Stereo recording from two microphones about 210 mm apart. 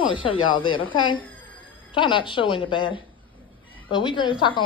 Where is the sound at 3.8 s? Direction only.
20° left (ahead or behind).